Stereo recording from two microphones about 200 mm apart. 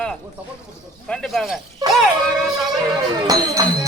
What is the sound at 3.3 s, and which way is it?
Music, 20° right (ahead or behind).